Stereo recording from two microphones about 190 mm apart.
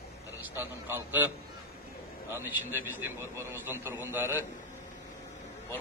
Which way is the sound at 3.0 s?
15° right (ahead or behind).